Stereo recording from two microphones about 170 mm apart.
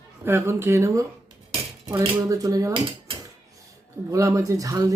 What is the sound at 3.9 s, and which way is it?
Speech, 20° right (ahead or behind).